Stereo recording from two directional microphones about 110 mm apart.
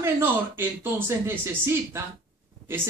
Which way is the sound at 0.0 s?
20° right (ahead or behind).